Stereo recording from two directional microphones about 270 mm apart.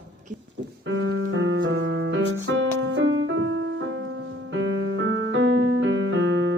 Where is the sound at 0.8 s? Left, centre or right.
Right.